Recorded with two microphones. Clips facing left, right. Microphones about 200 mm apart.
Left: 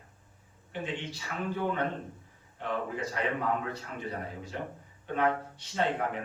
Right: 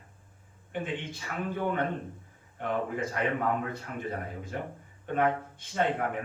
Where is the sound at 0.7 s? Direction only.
50° right (ahead or behind).